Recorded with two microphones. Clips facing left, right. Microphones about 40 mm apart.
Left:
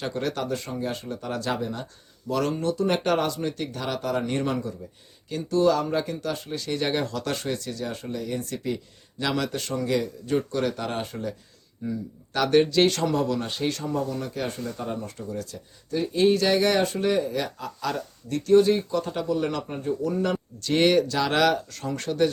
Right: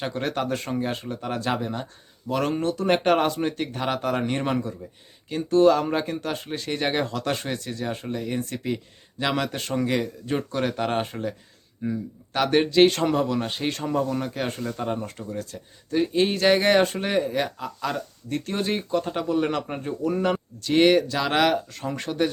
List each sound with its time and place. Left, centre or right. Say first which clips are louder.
0.0 s speech: right 1 dB; right
0.4 s speech: right 2 dB; right
1.0 s speech: right 2 dB; right
4.3 s speech: right 1 dB; right
12.9 s speech: right 2 dB; right
13.1 s speech: right 1 dB; right
13.7 s speech: right 3 dB; right
17.6 s speech: right 1 dB; centre
18.3 s speech: left 8 dB; right
20.6 s speech: right 2 dB; centre